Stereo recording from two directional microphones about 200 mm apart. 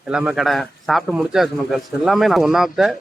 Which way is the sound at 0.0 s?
5° right (ahead or behind).